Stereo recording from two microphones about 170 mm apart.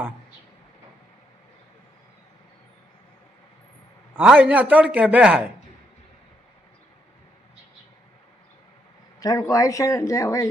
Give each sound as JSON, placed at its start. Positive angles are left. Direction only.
{"t": 4.1, "sound": "a man's voice", "side_deg": -5}
{"t": 9.2, "sound": "speech", "side_deg": 20}